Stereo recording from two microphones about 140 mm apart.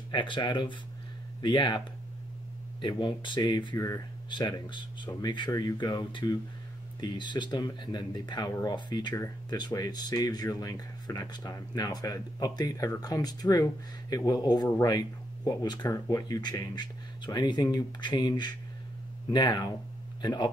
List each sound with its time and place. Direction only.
0.1 s speech: 35° left (ahead or behind)
2.8 s speech: 35° left (ahead or behind)
4.3 s speech: 35° left (ahead or behind)